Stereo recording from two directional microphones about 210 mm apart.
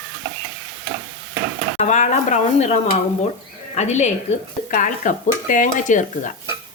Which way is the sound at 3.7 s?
35° left (ahead or behind).